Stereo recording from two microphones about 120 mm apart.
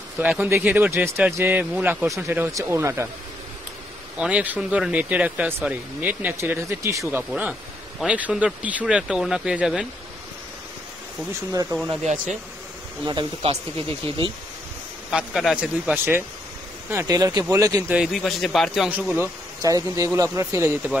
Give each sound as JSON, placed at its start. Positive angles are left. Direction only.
{"t": 0.2, "sound": "speech", "side_deg": -10}
{"t": 4.2, "sound": "speech", "side_deg": -10}
{"t": 12.0, "sound": "speech", "side_deg": -85}
{"t": 13.0, "sound": "speech", "side_deg": -40}
{"t": 15.0, "sound": "speech", "side_deg": -5}
{"t": 16.9, "sound": "speech", "side_deg": -25}
{"t": 17.8, "sound": "a man's voice", "side_deg": -10}
{"t": 18.9, "sound": "speech", "side_deg": -15}
{"t": 19.6, "sound": "speech", "side_deg": -30}